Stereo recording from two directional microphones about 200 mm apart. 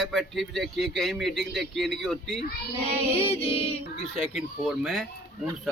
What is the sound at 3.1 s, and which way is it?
Music, 30° left (ahead or behind).